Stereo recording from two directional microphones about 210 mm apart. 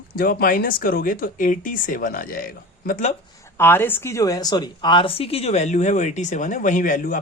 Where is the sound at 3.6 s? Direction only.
10° left (ahead or behind).